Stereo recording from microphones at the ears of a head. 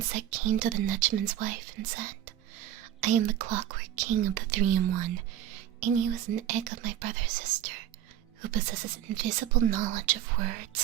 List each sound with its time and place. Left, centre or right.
0.0 s speech: right